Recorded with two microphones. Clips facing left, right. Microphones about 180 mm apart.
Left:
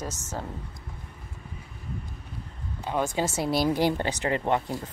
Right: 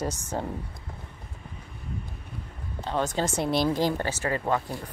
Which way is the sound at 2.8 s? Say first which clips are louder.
Even; 10° left (ahead or behind).